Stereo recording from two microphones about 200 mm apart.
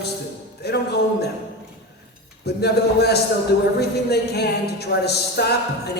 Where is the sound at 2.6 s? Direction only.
55° left (ahead or behind).